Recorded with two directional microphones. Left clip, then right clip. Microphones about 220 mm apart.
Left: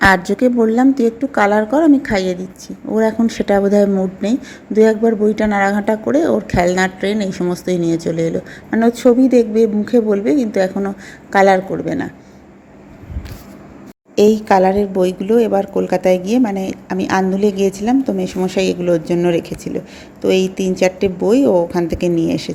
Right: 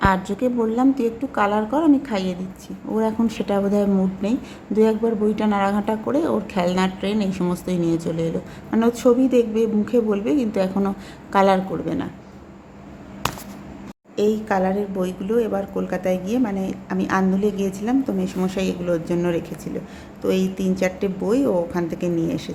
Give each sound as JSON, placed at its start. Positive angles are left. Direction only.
{"t": 0.0, "sound": "a woman's voice", "side_deg": 25}
{"t": 14.2, "sound": "a woman's voice", "side_deg": 25}